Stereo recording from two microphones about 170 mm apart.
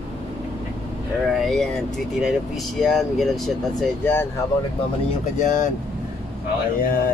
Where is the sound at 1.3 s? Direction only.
Centre (ahead or behind).